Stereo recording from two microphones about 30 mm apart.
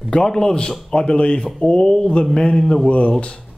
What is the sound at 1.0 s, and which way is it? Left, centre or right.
Speech, left.